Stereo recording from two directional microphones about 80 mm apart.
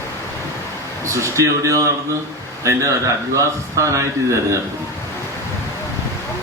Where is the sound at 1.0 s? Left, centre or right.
Right.